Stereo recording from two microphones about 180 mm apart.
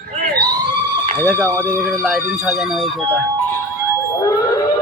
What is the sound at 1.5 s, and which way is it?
Speech, 10° left (ahead or behind).